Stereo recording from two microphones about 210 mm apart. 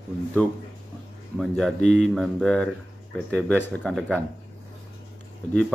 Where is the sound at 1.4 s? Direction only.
Centre (ahead or behind).